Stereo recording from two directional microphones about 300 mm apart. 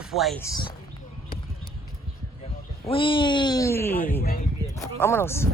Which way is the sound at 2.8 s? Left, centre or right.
Centre.